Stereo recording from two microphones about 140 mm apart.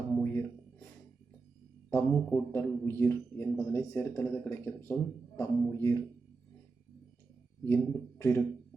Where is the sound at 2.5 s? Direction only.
15° left (ahead or behind).